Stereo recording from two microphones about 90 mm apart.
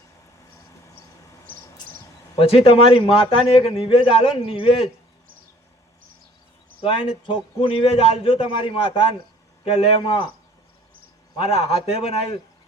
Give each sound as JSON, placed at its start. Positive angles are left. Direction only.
{"t": 2.4, "sound": "a man's voice", "side_deg": 90}
{"t": 6.8, "sound": "a man's voice", "side_deg": 75}
{"t": 11.3, "sound": "a man's voice", "side_deg": 90}